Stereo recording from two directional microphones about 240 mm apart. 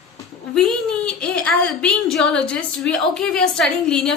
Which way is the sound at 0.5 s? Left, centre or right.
Centre.